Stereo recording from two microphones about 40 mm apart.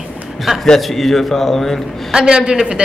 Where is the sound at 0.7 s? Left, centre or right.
Centre.